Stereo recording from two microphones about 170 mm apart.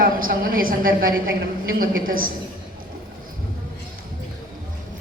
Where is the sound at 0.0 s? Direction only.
60° right (ahead or behind).